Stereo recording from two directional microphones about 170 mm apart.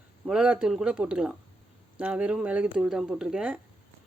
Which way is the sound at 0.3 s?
5° right (ahead or behind).